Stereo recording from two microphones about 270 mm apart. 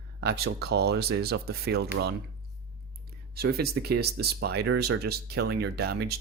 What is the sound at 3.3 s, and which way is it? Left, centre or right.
Speech, right.